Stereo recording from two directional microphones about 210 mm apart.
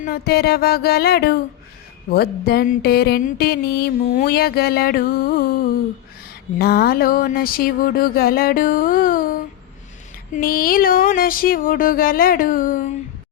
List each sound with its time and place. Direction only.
0.0 s music: 45° left (ahead or behind)
6.6 s music: 50° left (ahead or behind)
10.3 s music: 45° left (ahead or behind)